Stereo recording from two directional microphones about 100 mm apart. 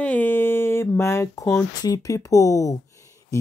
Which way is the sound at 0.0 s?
15° left (ahead or behind).